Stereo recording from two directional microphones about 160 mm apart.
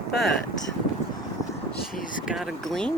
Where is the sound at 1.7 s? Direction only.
60° left (ahead or behind).